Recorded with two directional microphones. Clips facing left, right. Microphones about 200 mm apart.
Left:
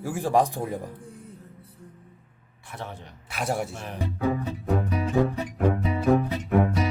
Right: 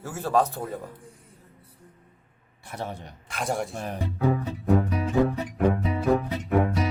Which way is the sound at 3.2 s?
5° left (ahead or behind).